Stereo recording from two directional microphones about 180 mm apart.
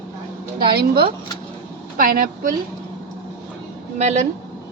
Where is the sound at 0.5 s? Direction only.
60° right (ahead or behind).